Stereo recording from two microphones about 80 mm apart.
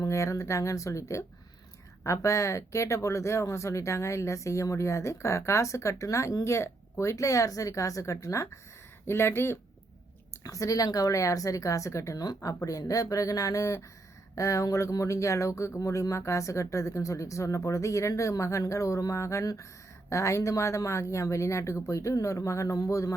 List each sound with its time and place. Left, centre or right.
0.0 s speech: left
10.4 s speech: left
12.1 s speech: left